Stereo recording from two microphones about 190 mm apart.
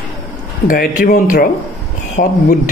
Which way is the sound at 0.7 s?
50° left (ahead or behind).